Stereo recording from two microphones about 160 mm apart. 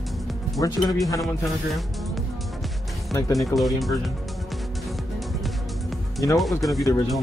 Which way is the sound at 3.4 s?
Centre (ahead or behind).